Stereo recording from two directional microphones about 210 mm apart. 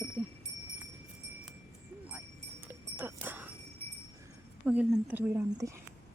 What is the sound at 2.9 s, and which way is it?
Music, 10° right (ahead or behind).